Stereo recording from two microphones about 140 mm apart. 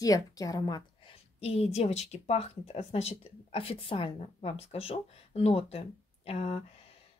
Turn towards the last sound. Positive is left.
turn(degrees=45)  # may be behind; listen again after turning